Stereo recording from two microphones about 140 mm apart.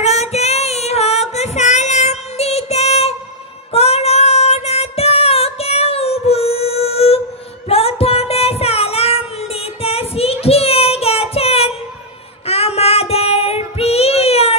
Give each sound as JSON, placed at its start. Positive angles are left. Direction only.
{"t": 0.0, "sound": "female singing", "side_deg": 50}
{"t": 3.7, "sound": "child singing", "side_deg": 45}